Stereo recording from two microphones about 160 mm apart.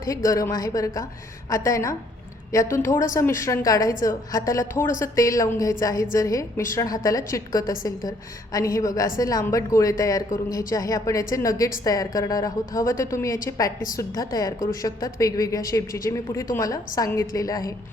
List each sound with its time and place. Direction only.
0.0 s a woman's voice: 20° left (ahead or behind)